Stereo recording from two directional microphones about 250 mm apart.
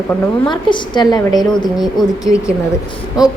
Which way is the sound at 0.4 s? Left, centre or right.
Centre.